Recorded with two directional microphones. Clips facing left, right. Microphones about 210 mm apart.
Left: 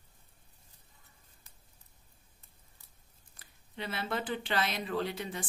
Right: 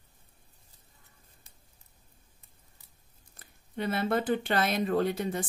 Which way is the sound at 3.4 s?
50° right (ahead or behind).